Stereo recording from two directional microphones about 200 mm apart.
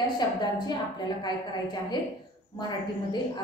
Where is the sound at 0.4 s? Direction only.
20° left (ahead or behind).